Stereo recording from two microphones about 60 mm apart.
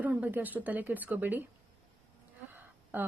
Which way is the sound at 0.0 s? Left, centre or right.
Right.